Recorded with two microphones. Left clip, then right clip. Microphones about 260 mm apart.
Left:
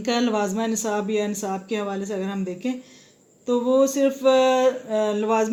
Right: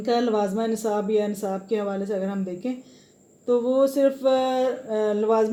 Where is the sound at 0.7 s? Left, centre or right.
Left.